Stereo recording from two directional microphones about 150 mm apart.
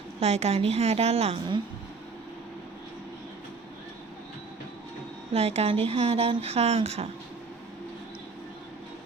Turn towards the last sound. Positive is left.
turn(degrees=-45)  # may be behind; listen again after turning